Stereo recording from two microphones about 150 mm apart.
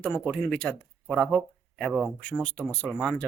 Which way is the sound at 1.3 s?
Centre (ahead or behind).